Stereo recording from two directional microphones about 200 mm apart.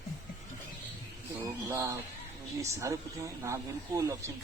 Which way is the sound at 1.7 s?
15° right (ahead or behind).